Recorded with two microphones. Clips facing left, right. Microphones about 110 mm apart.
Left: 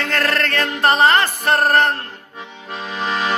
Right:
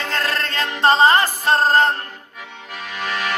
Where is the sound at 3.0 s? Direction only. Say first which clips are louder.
Left 3 dB; 20° left (ahead or behind).